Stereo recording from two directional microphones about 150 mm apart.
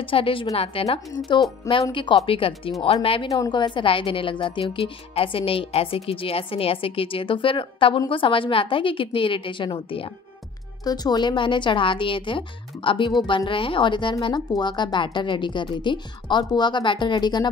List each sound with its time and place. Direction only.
0.0 s a woman's voice: 35° left (ahead or behind)